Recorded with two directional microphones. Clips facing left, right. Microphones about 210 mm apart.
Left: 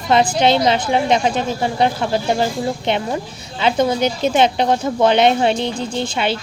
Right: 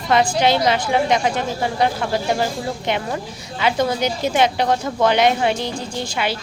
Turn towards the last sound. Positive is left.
turn(degrees=25)  # may be behind; listen again after turning